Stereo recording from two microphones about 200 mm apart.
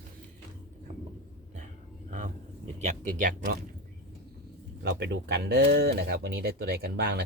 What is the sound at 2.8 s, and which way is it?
Speech, 40° right (ahead or behind).